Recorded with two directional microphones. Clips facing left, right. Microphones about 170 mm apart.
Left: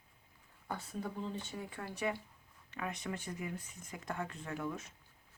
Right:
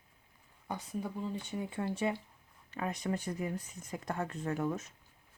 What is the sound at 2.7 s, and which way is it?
Speech, 35° right (ahead or behind).